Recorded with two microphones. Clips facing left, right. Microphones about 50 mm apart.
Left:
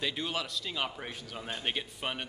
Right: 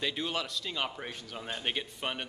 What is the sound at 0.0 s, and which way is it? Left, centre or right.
A man's voice, centre.